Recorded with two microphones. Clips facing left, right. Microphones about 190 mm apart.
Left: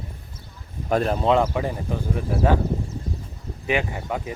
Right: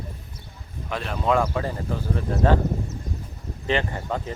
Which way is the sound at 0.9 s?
45° left (ahead or behind).